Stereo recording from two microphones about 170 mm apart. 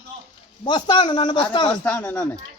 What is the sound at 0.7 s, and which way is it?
Speech, 25° left (ahead or behind).